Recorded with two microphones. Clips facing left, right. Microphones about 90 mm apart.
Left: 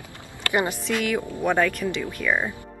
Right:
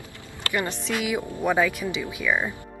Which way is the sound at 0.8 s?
5° right (ahead or behind).